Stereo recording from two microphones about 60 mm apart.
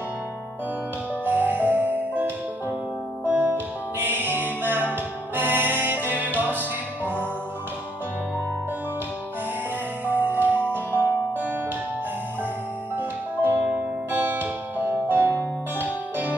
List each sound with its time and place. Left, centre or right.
1.2 s music: right
10.0 s music: right
12.9 s music: right